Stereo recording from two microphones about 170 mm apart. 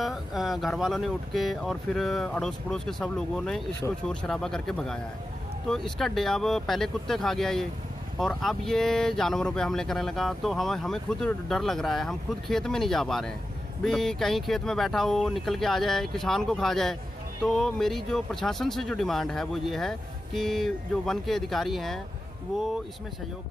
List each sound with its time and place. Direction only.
0.0 s speech: centre (ahead or behind)